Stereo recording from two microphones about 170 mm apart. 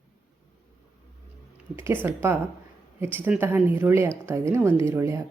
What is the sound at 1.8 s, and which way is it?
A woman's voice, 15° right (ahead or behind).